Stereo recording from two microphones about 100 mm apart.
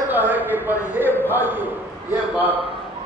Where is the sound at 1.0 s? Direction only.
20° left (ahead or behind).